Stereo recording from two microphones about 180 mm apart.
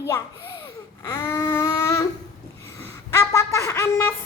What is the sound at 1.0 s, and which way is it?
Baby cry, 20° left (ahead or behind).